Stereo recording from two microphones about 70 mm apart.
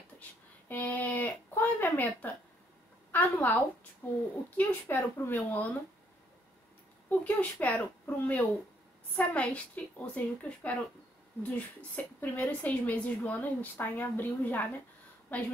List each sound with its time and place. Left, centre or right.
0.7 s a woman's voice: left
4.9 s a woman's voice: left
7.1 s a woman's voice: left